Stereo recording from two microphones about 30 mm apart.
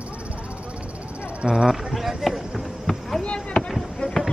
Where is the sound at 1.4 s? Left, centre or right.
Centre.